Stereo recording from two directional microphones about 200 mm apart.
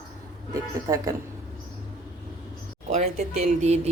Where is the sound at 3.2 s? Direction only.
35° right (ahead or behind).